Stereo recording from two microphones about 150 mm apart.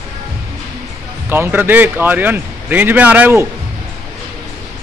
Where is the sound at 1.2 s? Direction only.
15° right (ahead or behind).